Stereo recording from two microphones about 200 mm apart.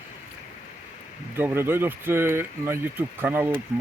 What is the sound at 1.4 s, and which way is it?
Speech, 10° right (ahead or behind).